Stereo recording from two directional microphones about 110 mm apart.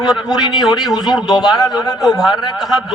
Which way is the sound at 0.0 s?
5° right (ahead or behind).